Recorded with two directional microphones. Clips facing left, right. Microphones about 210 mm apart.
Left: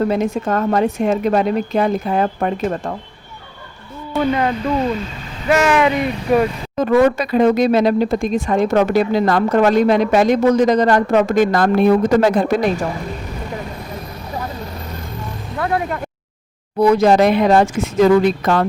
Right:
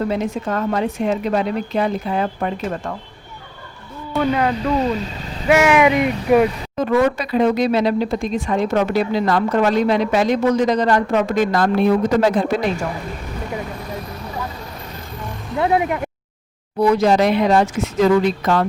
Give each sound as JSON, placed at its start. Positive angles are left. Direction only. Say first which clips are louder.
{"t": 0.1, "sound": "speech", "louder": "left 3 dB", "side_deg": 45}
{"t": 4.1, "sound": "speech", "louder": "left 1 dB", "side_deg": 0}
{"t": 5.5, "sound": "speech", "louder": "right 1 dB", "side_deg": -10}
{"t": 6.7, "sound": "speech", "louder": "left 4 dB", "side_deg": 45}
{"t": 15.5, "sound": "speech", "louder": "right 3 dB", "side_deg": -20}
{"t": 16.8, "sound": "speech", "louder": "left 3 dB", "side_deg": 50}